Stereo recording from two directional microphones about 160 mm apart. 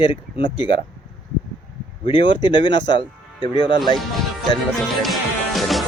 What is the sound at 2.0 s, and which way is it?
Speech, 30° left (ahead or behind).